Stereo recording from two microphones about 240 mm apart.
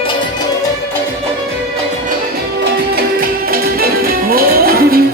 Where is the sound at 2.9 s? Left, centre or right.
Right.